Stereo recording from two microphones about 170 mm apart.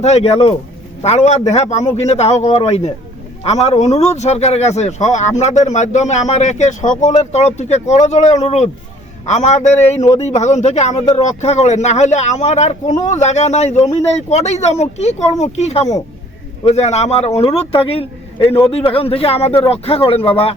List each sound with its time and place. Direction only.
0.0 s a man's voice: 40° left (ahead or behind)